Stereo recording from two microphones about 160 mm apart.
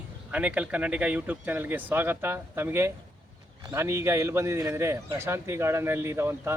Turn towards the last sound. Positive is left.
turn(degrees=-15)  # may be behind; listen again after turning